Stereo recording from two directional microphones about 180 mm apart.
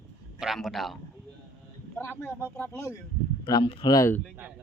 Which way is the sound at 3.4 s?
25° left (ahead or behind).